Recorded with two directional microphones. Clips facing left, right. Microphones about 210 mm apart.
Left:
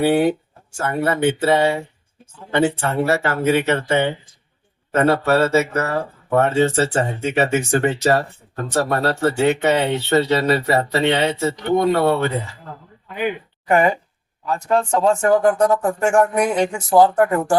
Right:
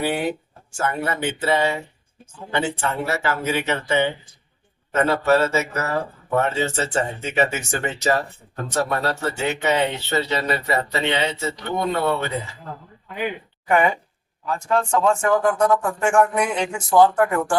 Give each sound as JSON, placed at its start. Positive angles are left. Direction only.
{"t": 0.1, "sound": "speech", "side_deg": 55}
{"t": 13.7, "sound": "speech", "side_deg": 35}